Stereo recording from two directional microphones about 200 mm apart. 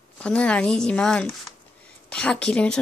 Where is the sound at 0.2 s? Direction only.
5° left (ahead or behind).